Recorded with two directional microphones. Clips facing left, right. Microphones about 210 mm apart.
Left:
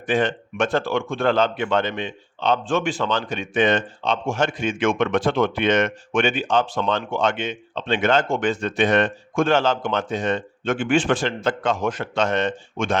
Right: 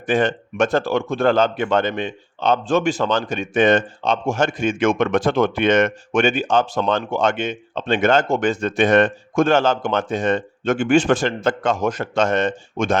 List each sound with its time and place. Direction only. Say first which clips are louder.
0.1 s speech: right 2 dB; 45° right (ahead or behind)